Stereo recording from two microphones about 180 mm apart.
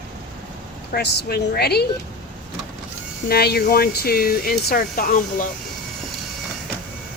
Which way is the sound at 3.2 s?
60° left (ahead or behind).